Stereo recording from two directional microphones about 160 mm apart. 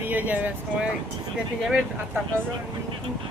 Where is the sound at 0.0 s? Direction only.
10° right (ahead or behind).